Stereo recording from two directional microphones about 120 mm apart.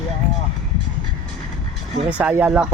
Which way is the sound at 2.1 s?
10° right (ahead or behind).